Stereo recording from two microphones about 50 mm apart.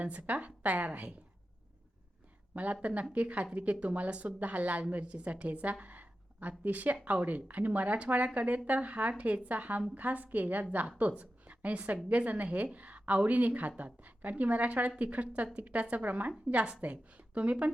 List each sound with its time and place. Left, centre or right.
0.0 s a woman's voice: right
2.8 s a woman's voice: right
5.8 s a sound: right
6.7 s a woman's voice: right
11.2 s a sound: right
12.0 s a woman's voice: right